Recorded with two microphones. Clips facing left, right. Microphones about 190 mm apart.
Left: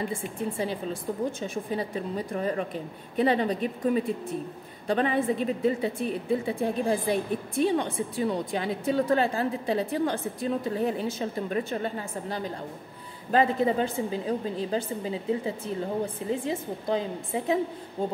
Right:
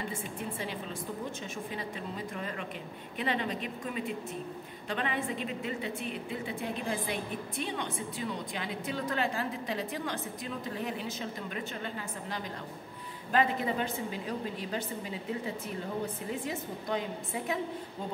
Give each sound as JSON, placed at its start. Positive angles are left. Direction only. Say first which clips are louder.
{"t": 1.7, "sound": "a woman's voice", "louder": "left 8 dB", "side_deg": 40}